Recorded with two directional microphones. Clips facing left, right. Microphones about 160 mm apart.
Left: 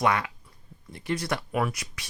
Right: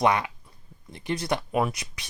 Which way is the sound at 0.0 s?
20° right (ahead or behind).